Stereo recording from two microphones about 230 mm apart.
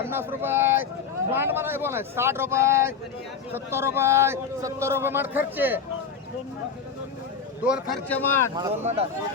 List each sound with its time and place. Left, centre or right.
0.0 s a man's voice: centre
7.6 s speech: centre
8.0 s speech: centre
8.8 s speech: right